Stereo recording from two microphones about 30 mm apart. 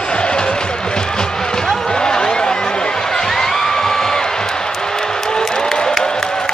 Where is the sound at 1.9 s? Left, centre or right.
Left.